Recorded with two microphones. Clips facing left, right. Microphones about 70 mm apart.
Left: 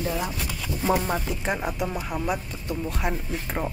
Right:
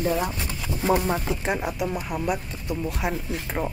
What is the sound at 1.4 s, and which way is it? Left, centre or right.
Speech, centre.